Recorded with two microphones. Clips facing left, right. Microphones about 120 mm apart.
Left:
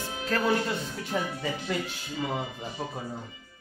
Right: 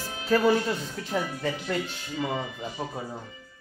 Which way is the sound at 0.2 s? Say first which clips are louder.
Right 4 dB; 5° right (ahead or behind).